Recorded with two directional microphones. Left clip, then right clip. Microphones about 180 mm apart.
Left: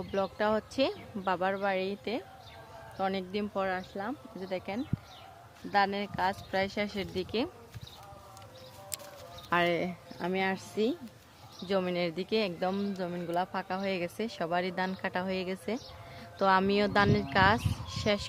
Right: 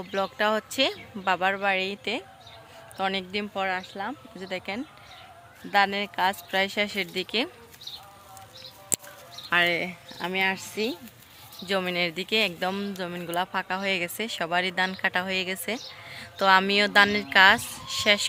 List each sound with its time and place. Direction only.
0.1 s speech: 5° right (ahead or behind)
3.5 s speech: 10° left (ahead or behind)
4.4 s speech: 15° right (ahead or behind)
9.5 s speech: 20° left (ahead or behind)
11.6 s speech: centre (ahead or behind)